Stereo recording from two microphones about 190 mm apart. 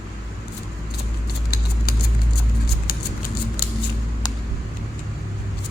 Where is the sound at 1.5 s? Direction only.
55° left (ahead or behind).